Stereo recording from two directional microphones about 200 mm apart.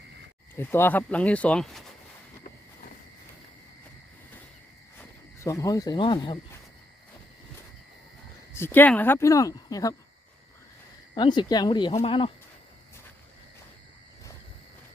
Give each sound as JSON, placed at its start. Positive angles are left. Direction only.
{"t": 0.5, "sound": "speech", "side_deg": 10}
{"t": 4.9, "sound": "speech", "side_deg": 15}
{"t": 8.5, "sound": "speech", "side_deg": 10}
{"t": 11.1, "sound": "speech", "side_deg": 20}